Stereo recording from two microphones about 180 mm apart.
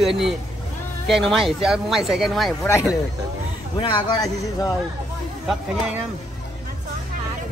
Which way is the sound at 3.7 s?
25° left (ahead or behind).